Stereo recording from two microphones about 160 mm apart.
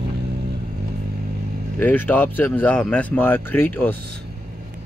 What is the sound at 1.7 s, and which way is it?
Speech, 10° left (ahead or behind).